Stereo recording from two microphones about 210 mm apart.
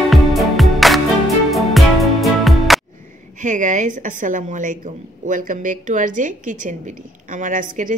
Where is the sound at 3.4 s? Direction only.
35° right (ahead or behind).